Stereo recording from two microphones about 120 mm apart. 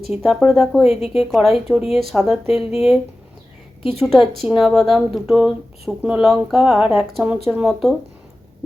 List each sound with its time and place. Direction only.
0.1 s speech: centre (ahead or behind)
0.9 s a woman's voice: 55° left (ahead or behind)
1.2 s speech: centre (ahead or behind)
4.0 s speech: centre (ahead or behind)